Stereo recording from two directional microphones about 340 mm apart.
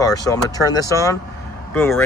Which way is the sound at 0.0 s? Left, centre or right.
Centre.